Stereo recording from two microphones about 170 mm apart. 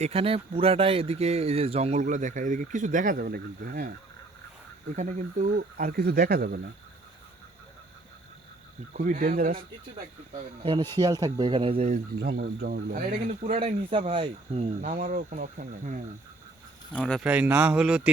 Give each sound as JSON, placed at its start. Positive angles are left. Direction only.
{"t": 0.0, "sound": "speech", "side_deg": -35}
{"t": 4.9, "sound": "speech", "side_deg": -50}
{"t": 8.9, "sound": "speech", "side_deg": -50}
{"t": 10.6, "sound": "speech", "side_deg": -30}
{"t": 12.2, "sound": "speech", "side_deg": -65}
{"t": 13.1, "sound": "speech", "side_deg": -40}
{"t": 14.8, "sound": "speech", "side_deg": -50}
{"t": 16.9, "sound": "speech", "side_deg": 5}
{"t": 17.2, "sound": "speech", "side_deg": -10}